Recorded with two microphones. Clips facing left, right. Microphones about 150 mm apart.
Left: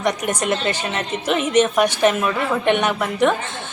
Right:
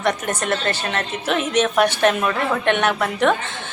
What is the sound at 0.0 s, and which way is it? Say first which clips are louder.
A woman's voice: left 1 dB; 15° left (ahead or behind).